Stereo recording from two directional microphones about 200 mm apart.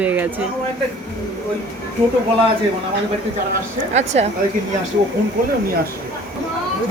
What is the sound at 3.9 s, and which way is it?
Speech, 35° right (ahead or behind).